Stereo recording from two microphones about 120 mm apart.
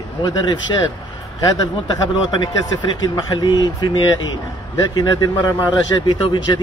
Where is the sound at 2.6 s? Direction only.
35° left (ahead or behind).